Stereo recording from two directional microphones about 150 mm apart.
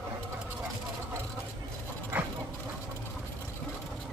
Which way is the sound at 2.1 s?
15° right (ahead or behind).